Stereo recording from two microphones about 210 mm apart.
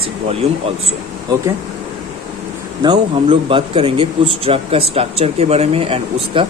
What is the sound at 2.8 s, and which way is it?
A man's voice, 25° right (ahead or behind).